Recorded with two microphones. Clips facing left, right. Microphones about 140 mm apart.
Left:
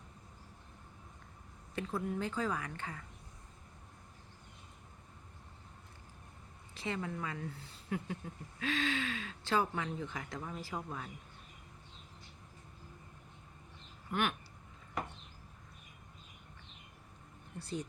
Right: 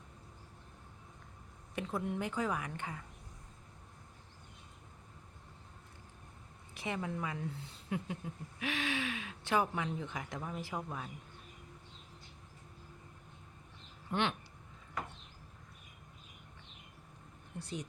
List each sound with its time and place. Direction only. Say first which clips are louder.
1.7 s speech: even; 20° right (ahead or behind)
6.7 s speech: right 1 dB; 15° right (ahead or behind)
14.1 s speech: right 1 dB; 25° right (ahead or behind)
17.6 s speech: left 2 dB; 15° right (ahead or behind)